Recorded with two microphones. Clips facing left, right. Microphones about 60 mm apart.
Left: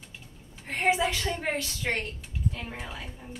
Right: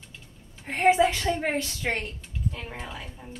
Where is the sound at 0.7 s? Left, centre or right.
Right.